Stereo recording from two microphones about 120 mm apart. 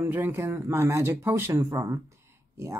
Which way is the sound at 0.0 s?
15° right (ahead or behind).